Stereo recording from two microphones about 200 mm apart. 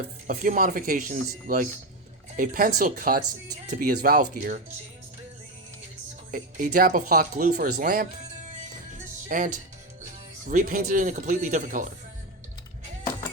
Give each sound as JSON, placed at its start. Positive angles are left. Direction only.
{"t": 0.3, "sound": "speech", "side_deg": -40}
{"t": 6.7, "sound": "speech", "side_deg": -40}